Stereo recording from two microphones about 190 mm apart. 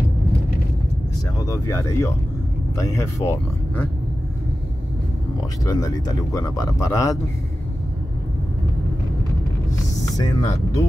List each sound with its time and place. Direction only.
1.4 s speech: 15° left (ahead or behind)
5.7 s speech: 20° left (ahead or behind)
10.1 s speech: 15° left (ahead or behind)